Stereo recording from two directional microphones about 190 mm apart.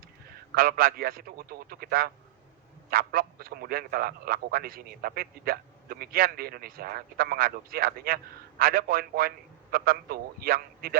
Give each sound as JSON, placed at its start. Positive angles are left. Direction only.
{"t": 0.5, "sound": "a man's voice", "side_deg": -50}